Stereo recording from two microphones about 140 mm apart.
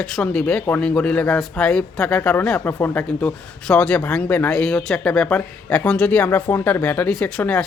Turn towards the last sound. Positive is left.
turn(degrees=10)  # may be behind; listen again after turning